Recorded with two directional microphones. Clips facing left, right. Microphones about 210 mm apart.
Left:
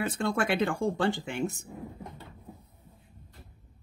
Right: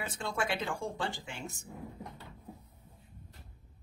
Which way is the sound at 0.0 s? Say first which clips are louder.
Left 7 dB; 60° left (ahead or behind).